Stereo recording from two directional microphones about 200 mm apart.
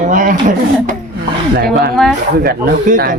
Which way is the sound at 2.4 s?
45° right (ahead or behind).